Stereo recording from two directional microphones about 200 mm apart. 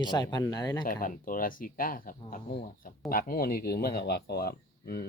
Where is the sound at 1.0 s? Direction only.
45° left (ahead or behind).